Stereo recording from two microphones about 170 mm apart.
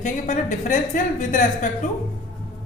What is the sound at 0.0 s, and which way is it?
A woman's voice, 45° left (ahead or behind).